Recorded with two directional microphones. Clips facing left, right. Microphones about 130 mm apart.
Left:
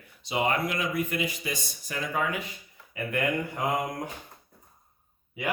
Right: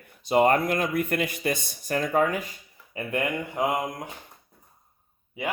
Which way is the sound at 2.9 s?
25° right (ahead or behind).